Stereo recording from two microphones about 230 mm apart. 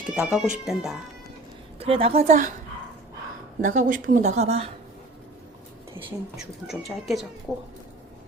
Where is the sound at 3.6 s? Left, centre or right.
Right.